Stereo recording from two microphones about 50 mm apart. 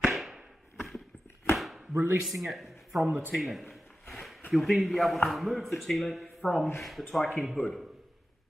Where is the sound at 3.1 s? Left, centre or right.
Right.